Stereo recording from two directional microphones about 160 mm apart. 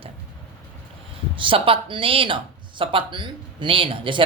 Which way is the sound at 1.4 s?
35° right (ahead or behind).